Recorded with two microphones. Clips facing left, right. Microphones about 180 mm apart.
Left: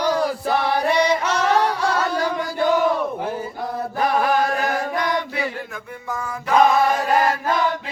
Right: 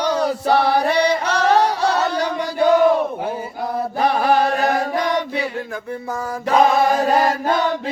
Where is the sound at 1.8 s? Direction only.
70° right (ahead or behind).